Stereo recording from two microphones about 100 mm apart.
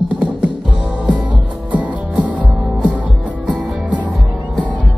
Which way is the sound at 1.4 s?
15° right (ahead or behind).